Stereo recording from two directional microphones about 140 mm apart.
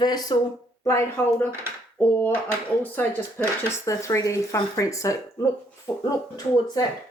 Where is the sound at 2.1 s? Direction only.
15° left (ahead or behind).